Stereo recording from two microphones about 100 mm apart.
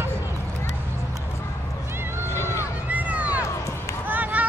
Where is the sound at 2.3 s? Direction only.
25° left (ahead or behind).